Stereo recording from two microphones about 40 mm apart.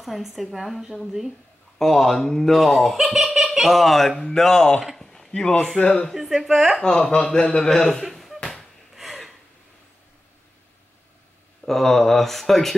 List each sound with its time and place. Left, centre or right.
0.0 s a woman's voice: centre
4.8 s a man's voice: centre; by 6.0 s left
6.1 s a woman's voice: centre
6.8 s a man's voice: centre
7.6 s speech: centre
8.0 s a sound: centre
8.9 s gasp: centre
11.6 s speech: centre